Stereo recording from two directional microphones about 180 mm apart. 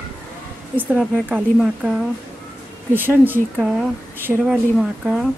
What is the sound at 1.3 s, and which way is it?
Speech, 5° right (ahead or behind).